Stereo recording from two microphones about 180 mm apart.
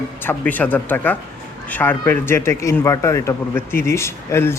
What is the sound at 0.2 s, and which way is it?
A man's voice, 10° left (ahead or behind).